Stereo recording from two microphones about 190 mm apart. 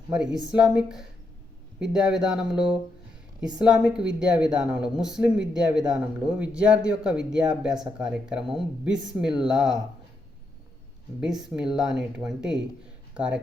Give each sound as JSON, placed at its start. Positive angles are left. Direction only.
{"t": 0.1, "sound": "a woman's voice", "side_deg": -5}
{"t": 11.2, "sound": "a woman's voice", "side_deg": -5}